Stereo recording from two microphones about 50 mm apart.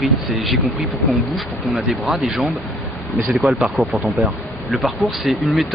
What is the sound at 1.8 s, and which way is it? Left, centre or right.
Speech, centre.